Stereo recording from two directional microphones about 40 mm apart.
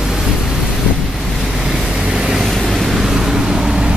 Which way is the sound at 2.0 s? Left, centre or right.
Centre.